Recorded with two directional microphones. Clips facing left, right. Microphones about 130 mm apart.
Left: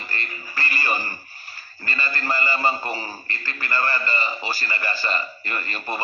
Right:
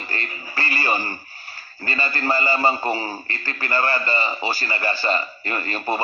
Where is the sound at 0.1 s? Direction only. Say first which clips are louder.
Right 2 dB; 25° right (ahead or behind).